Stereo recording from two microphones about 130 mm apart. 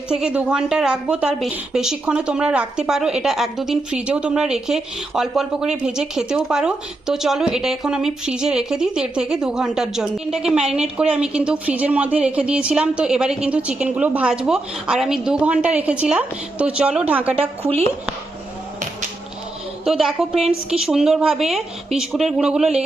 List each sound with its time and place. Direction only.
0.1 s a woman's voice: 5° right (ahead or behind)
17.6 s speech: 50° right (ahead or behind)
19.8 s a woman's voice: centre (ahead or behind)